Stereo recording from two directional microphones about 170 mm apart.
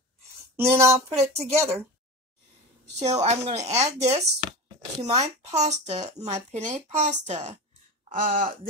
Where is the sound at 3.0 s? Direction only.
40° right (ahead or behind).